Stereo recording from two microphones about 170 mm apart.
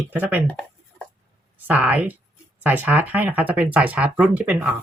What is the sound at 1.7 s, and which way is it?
Speech, 10° right (ahead or behind).